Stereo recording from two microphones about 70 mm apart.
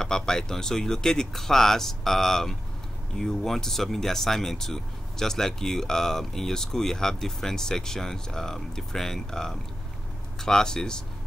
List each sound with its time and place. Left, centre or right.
0.0 s speech: centre